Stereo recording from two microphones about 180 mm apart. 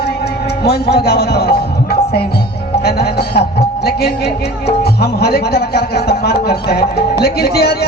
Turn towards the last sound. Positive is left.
turn(degrees=60)  # may be behind; listen again after turning